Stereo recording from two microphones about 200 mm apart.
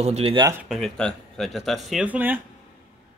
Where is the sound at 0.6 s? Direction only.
Centre (ahead or behind).